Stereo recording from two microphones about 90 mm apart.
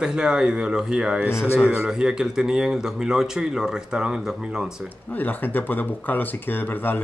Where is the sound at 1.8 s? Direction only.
5° right (ahead or behind).